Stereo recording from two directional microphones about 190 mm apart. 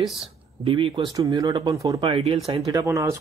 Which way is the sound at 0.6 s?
30° right (ahead or behind).